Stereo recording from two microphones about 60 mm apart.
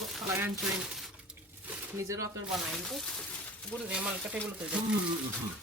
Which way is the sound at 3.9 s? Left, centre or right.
Centre.